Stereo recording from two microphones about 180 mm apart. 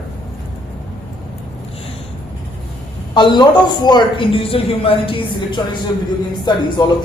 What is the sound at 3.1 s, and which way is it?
A man's voice, 25° left (ahead or behind).